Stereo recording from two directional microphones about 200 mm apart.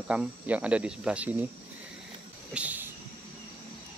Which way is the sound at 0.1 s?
5° right (ahead or behind).